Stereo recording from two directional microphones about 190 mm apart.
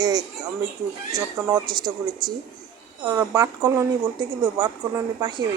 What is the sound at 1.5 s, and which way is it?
Speech, 20° right (ahead or behind).